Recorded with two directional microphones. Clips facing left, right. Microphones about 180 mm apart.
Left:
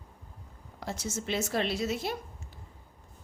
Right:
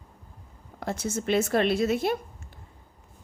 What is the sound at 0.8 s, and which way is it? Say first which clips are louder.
A woman's voice: right 6 dB; 55° right (ahead or behind).